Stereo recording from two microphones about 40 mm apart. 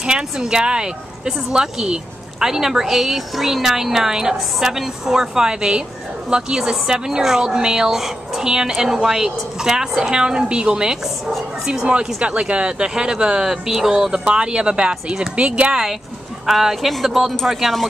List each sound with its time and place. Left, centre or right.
0.0 s a woman's voice: right
12.2 s speech: right; by 13.9 s centre
14.1 s speech: right
16.4 s a woman's voice: centre